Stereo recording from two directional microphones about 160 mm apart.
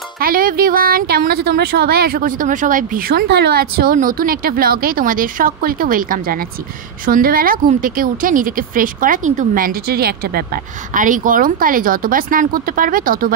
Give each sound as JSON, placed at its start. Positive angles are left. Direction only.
{"t": 0.2, "sound": "speech", "side_deg": -65}